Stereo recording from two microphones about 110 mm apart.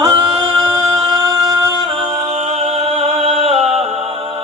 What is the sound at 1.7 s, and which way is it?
A capella, 40° right (ahead or behind).